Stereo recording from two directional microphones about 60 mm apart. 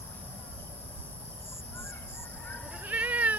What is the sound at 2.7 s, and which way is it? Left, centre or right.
Cat, right.